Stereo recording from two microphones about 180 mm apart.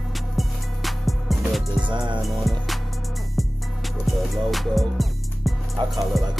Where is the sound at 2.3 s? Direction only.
Centre (ahead or behind).